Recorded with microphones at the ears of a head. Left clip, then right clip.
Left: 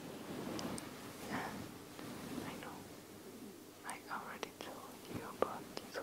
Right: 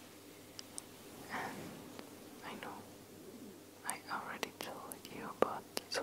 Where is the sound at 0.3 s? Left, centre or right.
Left.